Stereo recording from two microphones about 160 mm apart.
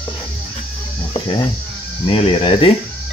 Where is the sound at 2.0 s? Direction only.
35° left (ahead or behind).